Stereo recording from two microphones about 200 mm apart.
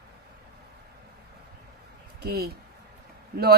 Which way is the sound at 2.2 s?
50° right (ahead or behind).